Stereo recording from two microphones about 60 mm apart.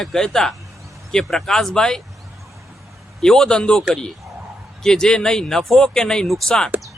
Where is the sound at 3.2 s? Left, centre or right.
Centre.